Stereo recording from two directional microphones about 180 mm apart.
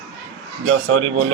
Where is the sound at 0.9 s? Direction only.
90° right.